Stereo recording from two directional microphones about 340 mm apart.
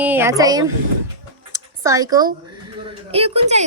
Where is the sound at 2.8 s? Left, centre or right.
Centre.